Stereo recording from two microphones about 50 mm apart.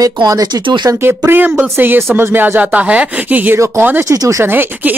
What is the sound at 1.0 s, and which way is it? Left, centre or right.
Speech, right.